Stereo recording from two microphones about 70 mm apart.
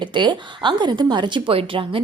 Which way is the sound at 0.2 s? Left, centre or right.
Right.